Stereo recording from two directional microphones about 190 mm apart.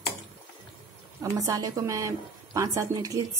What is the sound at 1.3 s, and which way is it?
A woman's voice, 20° right (ahead or behind).